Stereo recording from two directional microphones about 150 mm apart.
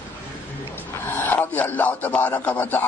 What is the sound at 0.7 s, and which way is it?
Speech, 15° left (ahead or behind).